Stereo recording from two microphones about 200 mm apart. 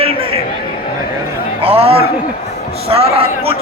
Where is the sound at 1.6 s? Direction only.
30° right (ahead or behind).